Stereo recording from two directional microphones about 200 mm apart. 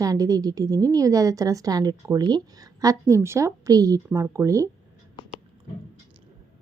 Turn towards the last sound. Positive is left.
turn(degrees=-15)  # may be behind; listen again after turning